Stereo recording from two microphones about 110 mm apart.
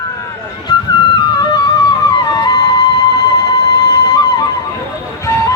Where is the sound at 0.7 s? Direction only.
40° left (ahead or behind).